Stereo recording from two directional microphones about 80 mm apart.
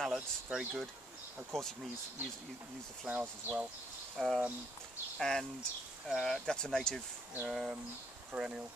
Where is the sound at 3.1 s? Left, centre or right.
Right.